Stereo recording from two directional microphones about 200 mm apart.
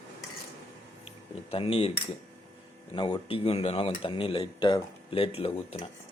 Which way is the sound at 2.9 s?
25° left (ahead or behind).